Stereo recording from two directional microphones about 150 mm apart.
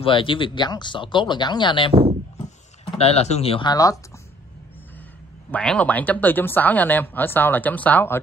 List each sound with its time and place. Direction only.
0.0 s speech: 35° left (ahead or behind)
3.0 s speech: 45° left (ahead or behind)
3.7 s speech: 25° left (ahead or behind)
5.5 s speech: 10° left (ahead or behind)